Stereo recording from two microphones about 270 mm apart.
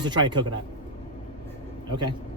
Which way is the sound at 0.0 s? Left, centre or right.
Centre.